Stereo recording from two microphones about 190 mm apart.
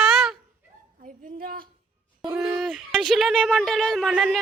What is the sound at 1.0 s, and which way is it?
Speech, 45° right (ahead or behind).